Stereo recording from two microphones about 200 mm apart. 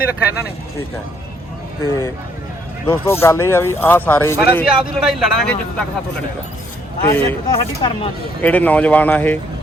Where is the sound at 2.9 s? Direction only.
10° left (ahead or behind).